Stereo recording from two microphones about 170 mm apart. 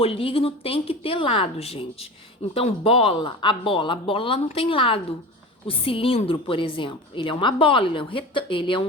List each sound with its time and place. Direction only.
0.0 s speech: 35° left (ahead or behind)